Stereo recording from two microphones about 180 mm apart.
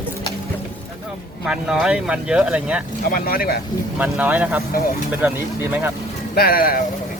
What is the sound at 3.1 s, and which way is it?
Speech, 55° left (ahead or behind).